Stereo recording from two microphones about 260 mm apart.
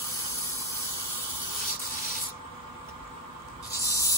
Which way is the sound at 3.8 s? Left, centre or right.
Centre.